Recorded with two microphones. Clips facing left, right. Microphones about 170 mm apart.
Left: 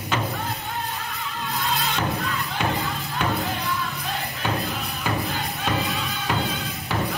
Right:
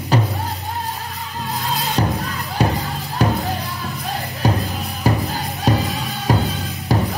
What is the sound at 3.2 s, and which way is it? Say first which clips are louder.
Music: right 6 dB; 40° right (ahead or behind).